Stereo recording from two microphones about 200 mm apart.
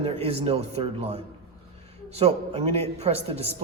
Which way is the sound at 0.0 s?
30° right (ahead or behind).